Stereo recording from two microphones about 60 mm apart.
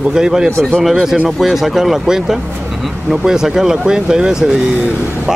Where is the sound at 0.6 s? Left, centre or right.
Centre.